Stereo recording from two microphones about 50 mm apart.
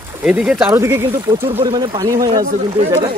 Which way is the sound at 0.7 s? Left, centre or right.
Right.